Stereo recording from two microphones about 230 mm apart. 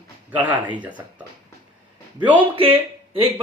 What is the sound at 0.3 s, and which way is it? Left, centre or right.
Speech, centre.